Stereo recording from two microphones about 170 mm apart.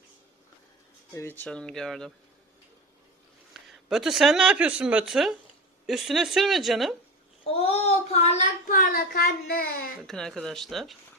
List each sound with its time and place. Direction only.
1.4 s a woman's voice: 5° left (ahead or behind)
3.5 s a woman's voice: centre (ahead or behind)
7.4 s child singing: 35° left (ahead or behind)
8.7 s a sound: 60° left (ahead or behind)
10.0 s a woman's voice: 5° left (ahead or behind)